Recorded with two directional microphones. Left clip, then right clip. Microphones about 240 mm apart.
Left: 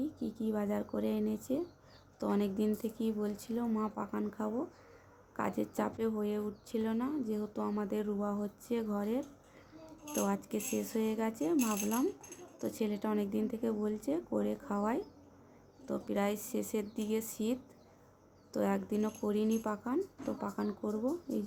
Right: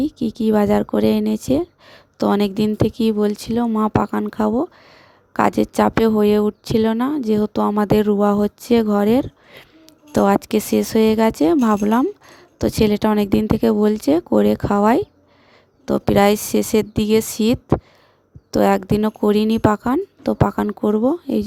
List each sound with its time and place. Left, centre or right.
0.0 s a woman's voice: right